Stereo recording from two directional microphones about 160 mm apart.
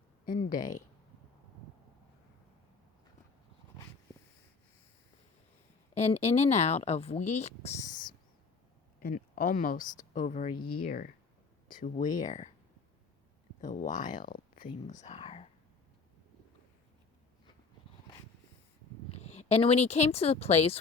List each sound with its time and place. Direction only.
0.3 s speech: 55° left (ahead or behind)
5.9 s speech: 45° left (ahead or behind)
7.9 s a sound: 55° left (ahead or behind)
9.0 s speech: 65° left (ahead or behind); by 12.5 s 50° left (ahead or behind)
13.6 s speech: 50° left (ahead or behind)
15.0 s speech: 40° left (ahead or behind)
19.1 s speech: 40° left (ahead or behind)